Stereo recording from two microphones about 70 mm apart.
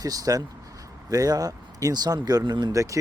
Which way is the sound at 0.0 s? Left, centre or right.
Right.